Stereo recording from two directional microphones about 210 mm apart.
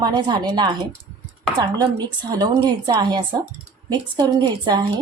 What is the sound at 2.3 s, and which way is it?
A woman's voice, 15° right (ahead or behind).